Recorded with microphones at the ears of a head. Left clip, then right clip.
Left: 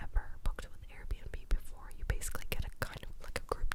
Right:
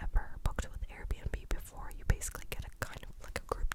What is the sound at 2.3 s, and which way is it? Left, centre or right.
Whispering, centre.